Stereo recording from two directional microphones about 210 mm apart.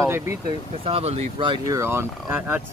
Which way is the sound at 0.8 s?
30° right (ahead or behind).